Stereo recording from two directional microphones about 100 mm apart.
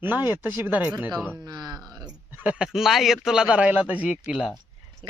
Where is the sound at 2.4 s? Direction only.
10° right (ahead or behind).